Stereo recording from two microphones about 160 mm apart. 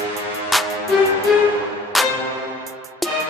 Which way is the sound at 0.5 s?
Centre (ahead or behind).